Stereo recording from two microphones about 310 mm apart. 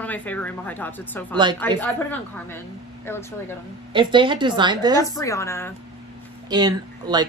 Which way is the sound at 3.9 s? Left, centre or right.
Centre.